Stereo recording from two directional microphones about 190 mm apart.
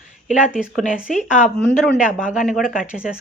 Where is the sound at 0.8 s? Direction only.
40° left (ahead or behind).